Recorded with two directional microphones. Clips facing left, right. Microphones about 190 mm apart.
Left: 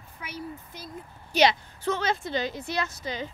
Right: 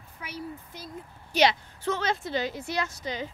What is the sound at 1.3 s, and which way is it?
Speech, 20° left (ahead or behind).